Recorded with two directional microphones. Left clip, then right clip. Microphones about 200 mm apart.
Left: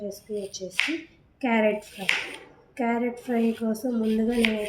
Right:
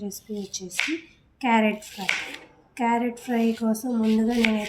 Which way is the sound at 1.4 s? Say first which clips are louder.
Right 1 dB; 55° right (ahead or behind).